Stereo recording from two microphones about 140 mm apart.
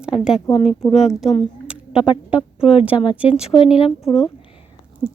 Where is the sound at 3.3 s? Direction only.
45° left (ahead or behind).